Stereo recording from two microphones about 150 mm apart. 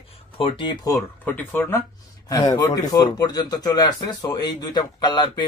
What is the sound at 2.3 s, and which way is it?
Speech, 25° left (ahead or behind).